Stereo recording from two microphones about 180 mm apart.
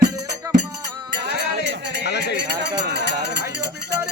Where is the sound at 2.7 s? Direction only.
70° right (ahead or behind).